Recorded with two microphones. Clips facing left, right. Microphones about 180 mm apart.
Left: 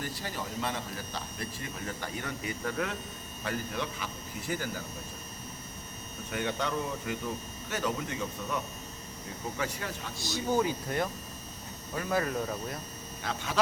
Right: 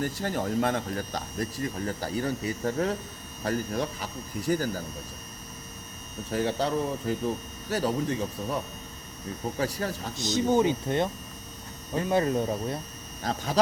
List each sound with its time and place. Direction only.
0.0 s speech: 50° right (ahead or behind)
6.3 s speech: 35° right (ahead or behind)
10.2 s speech: 20° right (ahead or behind); by 13.6 s 35° right (ahead or behind)